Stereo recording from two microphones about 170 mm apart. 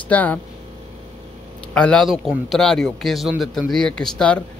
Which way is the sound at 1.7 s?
5° left (ahead or behind).